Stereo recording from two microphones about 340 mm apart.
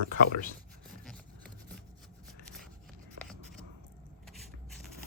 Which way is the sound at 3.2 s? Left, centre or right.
Centre.